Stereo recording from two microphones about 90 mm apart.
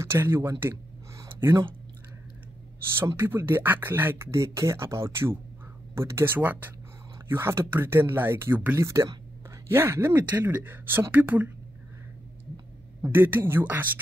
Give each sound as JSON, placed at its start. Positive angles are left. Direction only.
{"t": 0.0, "sound": "a sound", "side_deg": -25}
{"t": 3.0, "sound": "speech", "side_deg": -25}
{"t": 8.7, "sound": "speech", "side_deg": -35}
{"t": 13.0, "sound": "speech", "side_deg": -25}